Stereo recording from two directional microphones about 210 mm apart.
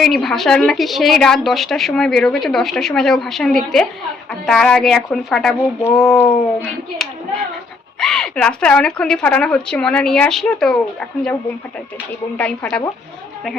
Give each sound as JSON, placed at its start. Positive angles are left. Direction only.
{"t": 0.0, "sound": "a woman's voice", "side_deg": 0}
{"t": 7.9, "sound": "a woman's voice", "side_deg": 5}
{"t": 12.4, "sound": "a woman's voice", "side_deg": 5}